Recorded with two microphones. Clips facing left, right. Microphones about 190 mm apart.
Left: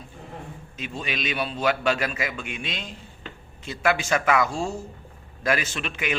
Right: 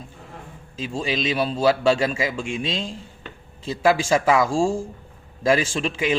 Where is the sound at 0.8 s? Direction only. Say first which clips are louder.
Right 6 dB; 30° right (ahead or behind).